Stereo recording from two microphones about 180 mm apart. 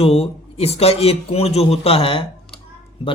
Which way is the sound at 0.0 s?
35° left (ahead or behind).